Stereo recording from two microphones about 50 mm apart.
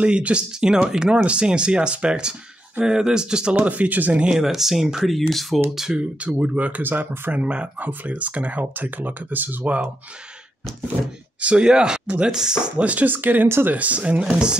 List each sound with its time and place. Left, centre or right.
0.0 s speech: right
3.5 s speech: right
4.4 s speech: centre
5.9 s speech: right
6.8 s speech: right
7.4 s speech: right
11.4 s speech: centre